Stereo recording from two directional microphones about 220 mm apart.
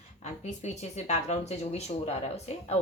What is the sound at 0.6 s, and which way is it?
Speech, 30° left (ahead or behind).